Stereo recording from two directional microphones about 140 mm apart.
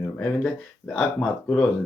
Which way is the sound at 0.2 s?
5° left (ahead or behind).